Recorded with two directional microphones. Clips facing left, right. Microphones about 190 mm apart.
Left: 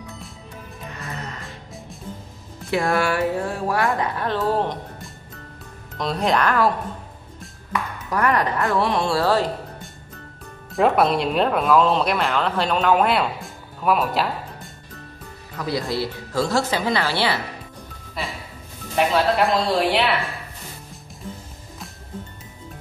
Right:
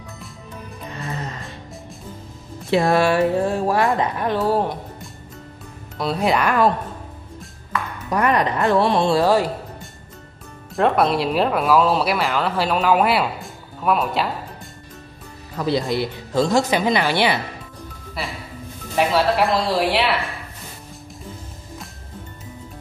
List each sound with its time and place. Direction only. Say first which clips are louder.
2.7 s speech: right 4 dB; 25° right (ahead or behind); by 4.7 s 10° right (ahead or behind)
5.9 s speech: right 1 dB; 5° right (ahead or behind)
8.1 s speech: right 2 dB; 20° right (ahead or behind)
9.2 s a woman's voice: right 3 dB; 15° right (ahead or behind)
10.7 s speech: even; centre (ahead or behind)
15.5 s a woman's voice: right 4 dB; 25° right (ahead or behind)
18.9 s speech: right 1 dB; centre (ahead or behind)